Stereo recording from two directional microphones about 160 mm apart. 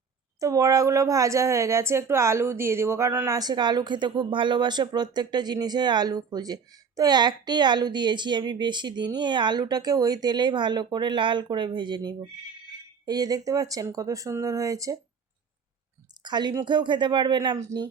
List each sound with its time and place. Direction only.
0.3 s a woman's voice: 20° right (ahead or behind)
16.2 s a woman's voice: 25° right (ahead or behind)